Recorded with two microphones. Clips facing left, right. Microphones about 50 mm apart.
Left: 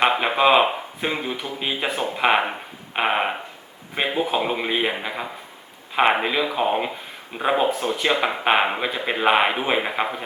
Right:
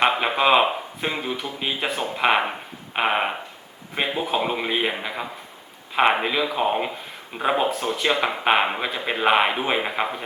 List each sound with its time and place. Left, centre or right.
0.0 s speech: centre